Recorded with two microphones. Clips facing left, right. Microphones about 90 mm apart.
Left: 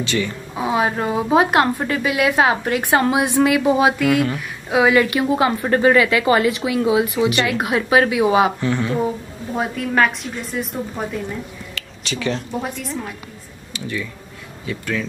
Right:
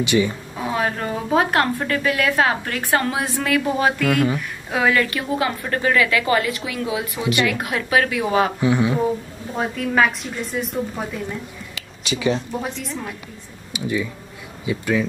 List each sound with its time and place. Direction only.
0.0 s speech: 15° right (ahead or behind)
0.6 s a woman's voice: 15° left (ahead or behind)
5.0 s a woman's voice: 25° left (ahead or behind)
8.5 s speech: 15° right (ahead or behind)
9.6 s a woman's voice: centre (ahead or behind)
11.7 s a sound: 5° right (ahead or behind)
12.8 s a woman's voice: centre (ahead or behind)
13.7 s speech: 15° right (ahead or behind)